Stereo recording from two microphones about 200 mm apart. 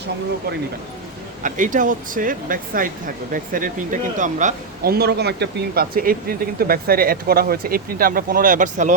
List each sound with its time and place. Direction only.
1.4 s speech: 40° right (ahead or behind)